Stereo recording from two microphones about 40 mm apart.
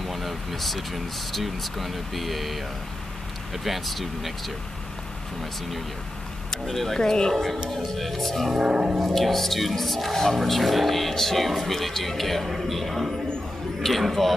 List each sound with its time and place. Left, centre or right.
0.0 s speech: centre
3.6 s speech: centre
6.6 s speech: centre
7.0 s speech: centre
8.5 s speech: centre
9.0 s speech: centre